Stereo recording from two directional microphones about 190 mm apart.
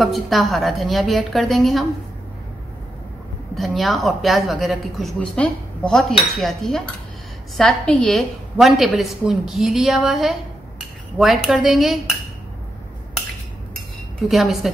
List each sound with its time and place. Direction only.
0.0 s a woman's voice: centre (ahead or behind)
3.5 s a woman's voice: centre (ahead or behind)
14.3 s a woman's voice: centre (ahead or behind)